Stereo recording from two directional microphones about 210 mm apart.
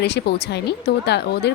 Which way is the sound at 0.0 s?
50° left (ahead or behind).